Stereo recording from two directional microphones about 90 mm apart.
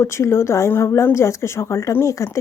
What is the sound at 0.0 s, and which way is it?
Speech, 30° left (ahead or behind).